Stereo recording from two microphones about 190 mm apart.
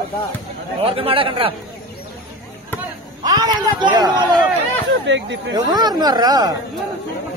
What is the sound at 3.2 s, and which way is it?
Speech, 20° right (ahead or behind).